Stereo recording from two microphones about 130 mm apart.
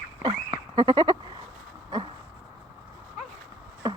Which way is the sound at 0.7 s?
40° right (ahead or behind).